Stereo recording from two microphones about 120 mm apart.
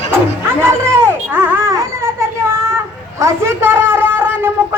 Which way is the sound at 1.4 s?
20° right (ahead or behind).